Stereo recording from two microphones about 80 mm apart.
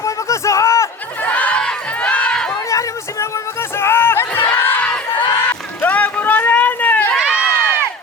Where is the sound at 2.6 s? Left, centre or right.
Left.